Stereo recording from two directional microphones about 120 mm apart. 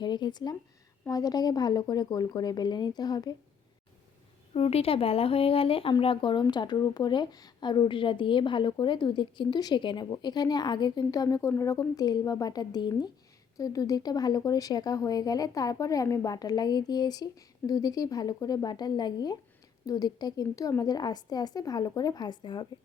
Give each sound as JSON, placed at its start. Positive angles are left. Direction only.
{"t": 0.0, "sound": "a woman's voice", "side_deg": 40}
{"t": 4.5, "sound": "a woman's voice", "side_deg": 55}